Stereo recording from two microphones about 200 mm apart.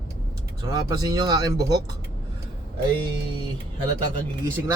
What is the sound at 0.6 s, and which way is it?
Speech, 20° right (ahead or behind).